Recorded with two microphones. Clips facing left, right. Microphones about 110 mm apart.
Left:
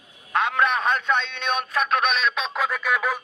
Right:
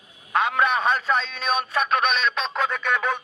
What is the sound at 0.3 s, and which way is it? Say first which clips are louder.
Speech: right 1 dB; centre (ahead or behind).